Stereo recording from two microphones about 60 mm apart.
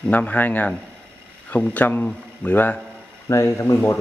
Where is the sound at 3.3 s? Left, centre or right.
Left.